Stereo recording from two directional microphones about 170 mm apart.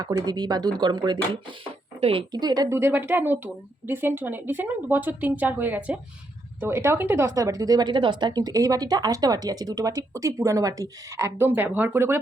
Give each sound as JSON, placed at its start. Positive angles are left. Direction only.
{"t": 0.0, "sound": "speech", "side_deg": -25}